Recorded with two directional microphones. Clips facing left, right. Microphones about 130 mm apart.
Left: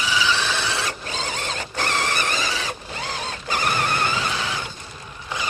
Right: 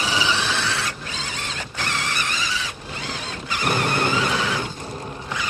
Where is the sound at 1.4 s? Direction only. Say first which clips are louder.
Left 3 dB; 40° left (ahead or behind).